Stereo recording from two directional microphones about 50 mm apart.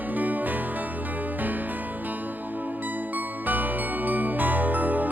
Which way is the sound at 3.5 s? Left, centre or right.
Right.